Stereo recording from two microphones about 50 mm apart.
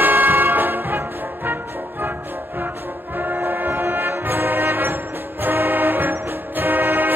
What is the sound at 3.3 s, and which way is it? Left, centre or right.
Music, right.